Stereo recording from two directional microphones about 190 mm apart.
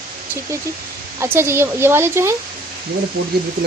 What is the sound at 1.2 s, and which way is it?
A woman's voice, 15° right (ahead or behind).